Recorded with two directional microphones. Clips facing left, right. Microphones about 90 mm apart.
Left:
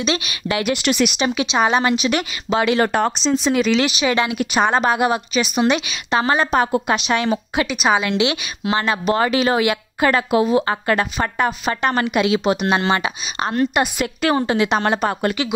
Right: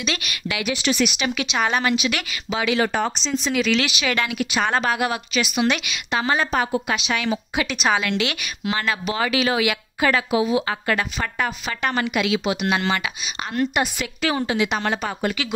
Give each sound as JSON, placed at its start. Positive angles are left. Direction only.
{"t": 0.0, "sound": "a woman's voice", "side_deg": 25}
{"t": 0.6, "sound": "speech", "side_deg": 55}
{"t": 1.1, "sound": "speech", "side_deg": 25}
{"t": 3.5, "sound": "a woman's voice", "side_deg": 30}
{"t": 4.4, "sound": "speech", "side_deg": 35}
{"t": 4.6, "sound": "a woman's voice", "side_deg": 20}
{"t": 7.6, "sound": "a woman's voice", "side_deg": 10}
{"t": 8.0, "sound": "a woman's voice", "side_deg": 20}
{"t": 8.9, "sound": "speech", "side_deg": 40}
{"t": 12.1, "sound": "speech", "side_deg": 30}